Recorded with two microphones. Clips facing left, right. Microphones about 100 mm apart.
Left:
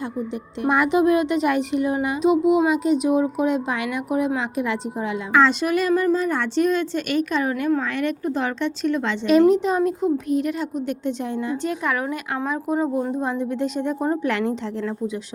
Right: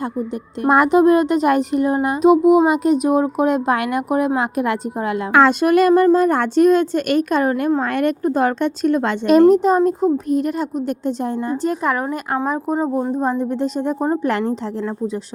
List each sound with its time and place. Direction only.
0.6 s a woman's voice: 45° right (ahead or behind)